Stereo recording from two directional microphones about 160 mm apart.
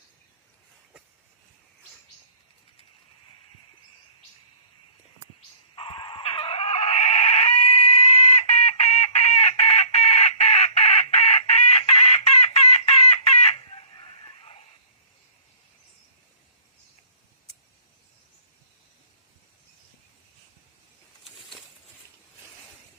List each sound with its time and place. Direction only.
5.7 s chicken: 35° left (ahead or behind)